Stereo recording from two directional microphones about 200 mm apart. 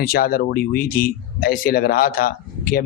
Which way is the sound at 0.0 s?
45° left (ahead or behind).